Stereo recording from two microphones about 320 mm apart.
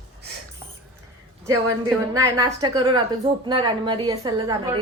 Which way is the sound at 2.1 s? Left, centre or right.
Centre.